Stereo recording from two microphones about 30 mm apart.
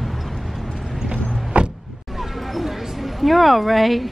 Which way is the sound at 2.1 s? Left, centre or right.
Centre.